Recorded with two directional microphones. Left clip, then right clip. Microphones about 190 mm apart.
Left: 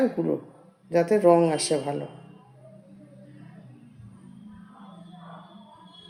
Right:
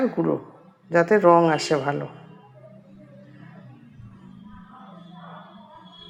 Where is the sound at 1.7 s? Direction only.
45° right (ahead or behind).